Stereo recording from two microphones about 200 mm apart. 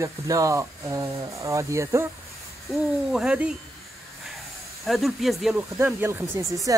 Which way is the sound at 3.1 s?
5° right (ahead or behind).